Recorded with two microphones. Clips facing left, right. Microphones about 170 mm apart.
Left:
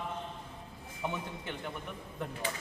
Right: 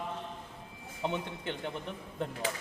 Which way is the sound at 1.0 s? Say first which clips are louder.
Right 3 dB; 20° right (ahead or behind).